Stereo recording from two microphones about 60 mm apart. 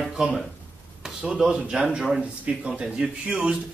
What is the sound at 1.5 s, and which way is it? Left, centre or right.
Speech, centre.